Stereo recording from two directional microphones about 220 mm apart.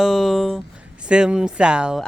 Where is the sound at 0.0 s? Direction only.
Centre (ahead or behind).